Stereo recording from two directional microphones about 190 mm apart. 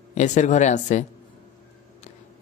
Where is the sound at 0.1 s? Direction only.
40° left (ahead or behind).